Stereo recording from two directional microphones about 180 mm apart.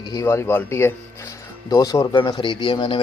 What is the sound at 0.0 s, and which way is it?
Speech, 20° left (ahead or behind).